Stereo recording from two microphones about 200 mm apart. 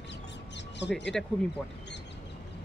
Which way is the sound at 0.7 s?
60° left (ahead or behind).